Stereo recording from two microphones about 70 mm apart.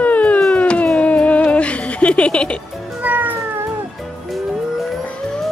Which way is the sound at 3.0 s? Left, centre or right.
Right.